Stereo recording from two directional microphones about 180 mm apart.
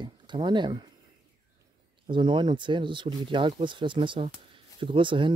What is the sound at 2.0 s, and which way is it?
Speech, 25° right (ahead or behind).